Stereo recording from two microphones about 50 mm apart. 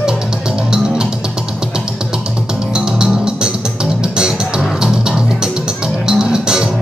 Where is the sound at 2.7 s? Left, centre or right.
Centre.